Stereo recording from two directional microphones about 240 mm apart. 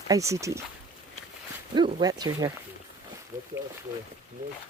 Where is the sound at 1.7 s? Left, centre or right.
Centre.